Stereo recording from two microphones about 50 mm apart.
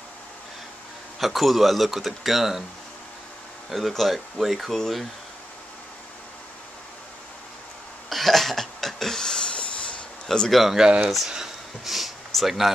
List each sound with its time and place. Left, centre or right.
1.2 s speech: centre
3.7 s speech: centre
8.1 s a sound: centre; by 10.0 s left
10.5 s speech: centre
11.2 s sniff: centre